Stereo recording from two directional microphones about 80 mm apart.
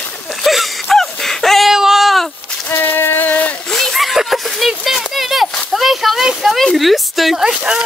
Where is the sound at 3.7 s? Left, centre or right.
Centre.